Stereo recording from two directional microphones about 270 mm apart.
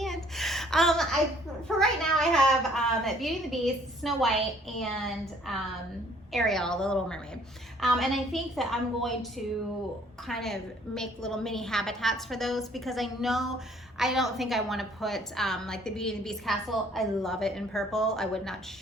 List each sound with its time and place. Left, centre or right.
0.0 s a sound: centre
1.6 s a woman's voice: centre
10.2 s a woman's voice: centre